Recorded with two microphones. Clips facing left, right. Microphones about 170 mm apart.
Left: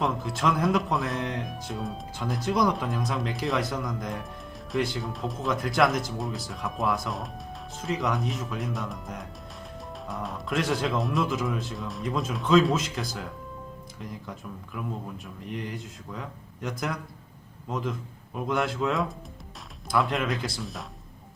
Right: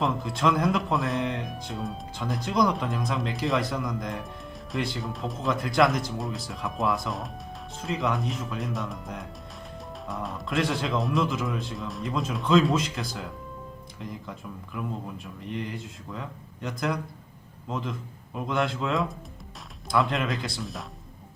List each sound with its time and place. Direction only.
0.0 s speech: centre (ahead or behind)
15.5 s speech: centre (ahead or behind)